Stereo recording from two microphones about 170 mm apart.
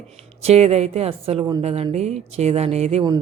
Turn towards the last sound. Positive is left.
turn(degrees=-40)  # may be behind; listen again after turning